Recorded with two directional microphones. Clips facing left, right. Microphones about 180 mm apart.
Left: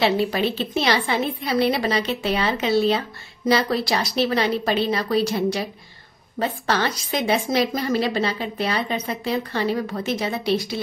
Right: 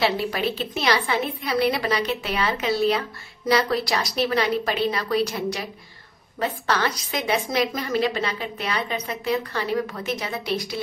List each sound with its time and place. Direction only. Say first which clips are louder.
0.0 s a woman's voice: left 3 dB; 25° left (ahead or behind)